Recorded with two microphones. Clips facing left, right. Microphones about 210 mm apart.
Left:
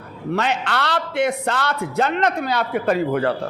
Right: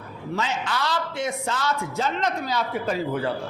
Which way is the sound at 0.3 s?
65° left (ahead or behind).